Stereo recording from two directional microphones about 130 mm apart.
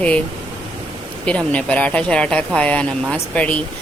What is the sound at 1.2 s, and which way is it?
Speech, 10° left (ahead or behind).